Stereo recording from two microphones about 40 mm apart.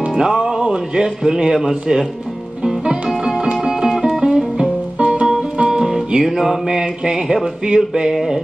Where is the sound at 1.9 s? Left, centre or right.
Centre.